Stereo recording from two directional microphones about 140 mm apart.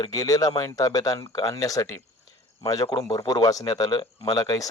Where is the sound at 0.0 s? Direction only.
25° left (ahead or behind).